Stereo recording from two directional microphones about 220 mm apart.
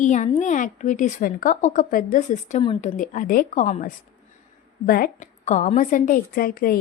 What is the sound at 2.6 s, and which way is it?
A woman's voice, 25° left (ahead or behind).